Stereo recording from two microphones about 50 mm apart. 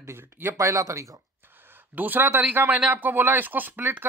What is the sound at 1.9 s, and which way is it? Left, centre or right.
Speech, right.